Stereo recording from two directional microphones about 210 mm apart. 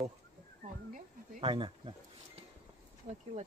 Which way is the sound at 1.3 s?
25° right (ahead or behind).